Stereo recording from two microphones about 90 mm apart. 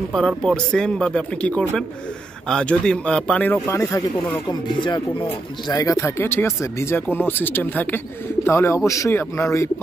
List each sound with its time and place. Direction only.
0.4 s speech: 5° left (ahead or behind)
4.5 s music: 60° left (ahead or behind)
5.7 s speech: 40° left (ahead or behind)